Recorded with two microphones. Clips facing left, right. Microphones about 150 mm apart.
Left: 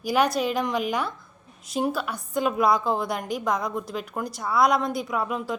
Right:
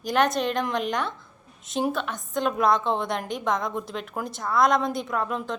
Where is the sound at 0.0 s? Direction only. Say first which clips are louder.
Even; 5° left (ahead or behind).